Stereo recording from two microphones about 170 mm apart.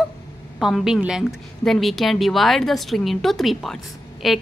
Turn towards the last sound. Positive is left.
turn(degrees=0)  # may be behind; listen again after turning